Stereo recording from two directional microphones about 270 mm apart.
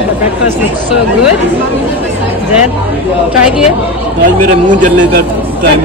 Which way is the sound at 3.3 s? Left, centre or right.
Centre.